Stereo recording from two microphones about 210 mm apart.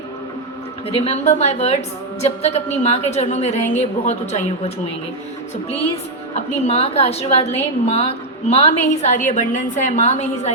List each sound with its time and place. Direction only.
0.9 s a woman's voice: 30° left (ahead or behind)
6.3 s a woman's voice: 30° left (ahead or behind)